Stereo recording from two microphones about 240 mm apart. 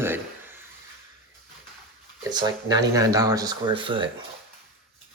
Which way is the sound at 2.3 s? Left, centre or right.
Centre.